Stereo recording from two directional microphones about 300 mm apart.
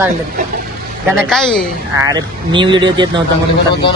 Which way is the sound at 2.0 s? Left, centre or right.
Centre.